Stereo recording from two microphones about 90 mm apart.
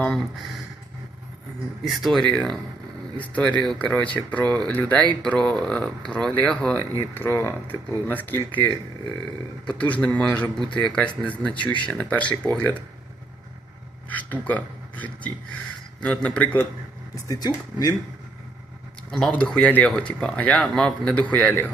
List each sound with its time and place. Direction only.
0.0 s speech: 5° left (ahead or behind)
1.8 s speech: centre (ahead or behind); by 8.4 s 20° left (ahead or behind)
9.6 s speech: 15° left (ahead or behind)
14.1 s speech: 15° left (ahead or behind)
17.2 s speech: 45° left (ahead or behind)
19.3 s speech: 10° left (ahead or behind)